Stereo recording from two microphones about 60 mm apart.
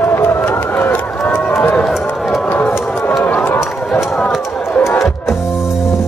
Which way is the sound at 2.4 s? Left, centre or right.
Left.